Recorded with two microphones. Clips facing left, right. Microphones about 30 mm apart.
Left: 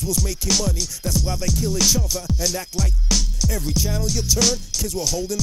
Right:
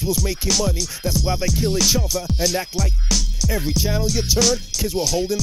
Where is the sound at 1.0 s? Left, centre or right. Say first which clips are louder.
Right 1 dB; centre.